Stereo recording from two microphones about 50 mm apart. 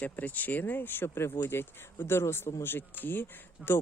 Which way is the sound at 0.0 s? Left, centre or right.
Left.